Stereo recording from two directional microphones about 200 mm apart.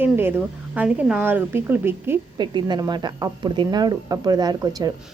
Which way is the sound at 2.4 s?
20° right (ahead or behind).